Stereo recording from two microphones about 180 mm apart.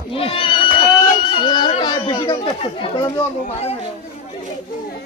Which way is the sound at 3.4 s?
35° left (ahead or behind).